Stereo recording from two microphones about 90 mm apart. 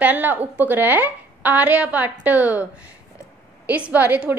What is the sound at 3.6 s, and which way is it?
Speech, 15° right (ahead or behind).